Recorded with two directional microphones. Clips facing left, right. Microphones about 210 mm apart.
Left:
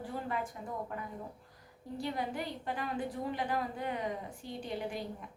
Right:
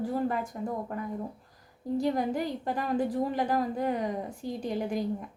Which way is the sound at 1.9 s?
45° right (ahead or behind).